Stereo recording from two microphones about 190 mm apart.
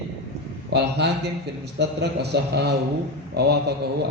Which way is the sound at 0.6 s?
65° right (ahead or behind).